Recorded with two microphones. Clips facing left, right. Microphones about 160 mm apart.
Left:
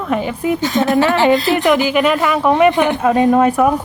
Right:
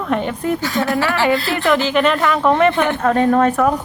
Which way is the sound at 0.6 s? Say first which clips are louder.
Left 5 dB; 20° left (ahead or behind).